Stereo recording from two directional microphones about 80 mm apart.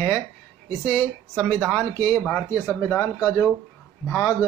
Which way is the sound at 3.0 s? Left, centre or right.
Left.